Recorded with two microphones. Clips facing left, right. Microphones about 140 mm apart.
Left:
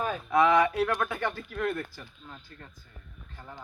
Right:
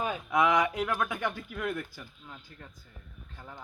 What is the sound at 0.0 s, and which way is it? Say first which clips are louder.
Speech: left 3 dB; 15° right (ahead or behind).